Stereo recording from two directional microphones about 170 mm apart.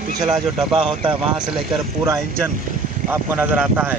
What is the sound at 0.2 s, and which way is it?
Speech, centre (ahead or behind).